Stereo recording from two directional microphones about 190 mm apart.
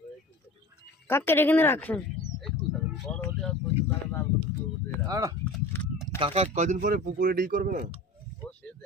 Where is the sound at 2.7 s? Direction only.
Centre (ahead or behind).